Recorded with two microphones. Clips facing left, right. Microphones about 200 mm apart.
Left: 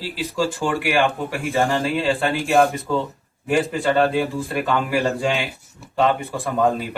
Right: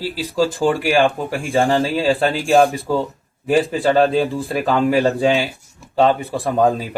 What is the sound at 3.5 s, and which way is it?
Speech, 30° right (ahead or behind).